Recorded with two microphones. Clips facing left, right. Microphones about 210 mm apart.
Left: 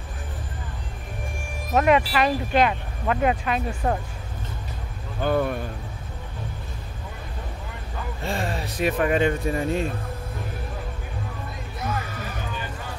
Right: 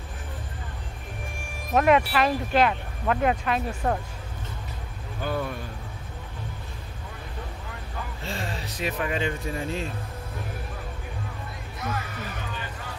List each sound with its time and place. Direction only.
1.7 s speech: centre (ahead or behind)
5.2 s speech: 55° left (ahead or behind)
8.2 s speech: 55° left (ahead or behind)